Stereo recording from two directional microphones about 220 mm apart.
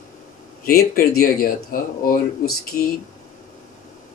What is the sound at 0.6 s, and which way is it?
Speech, 45° left (ahead or behind).